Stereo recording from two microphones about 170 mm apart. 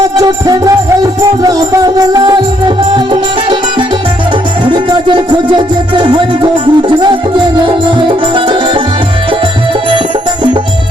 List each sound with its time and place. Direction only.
0.2 s music: 20° right (ahead or behind)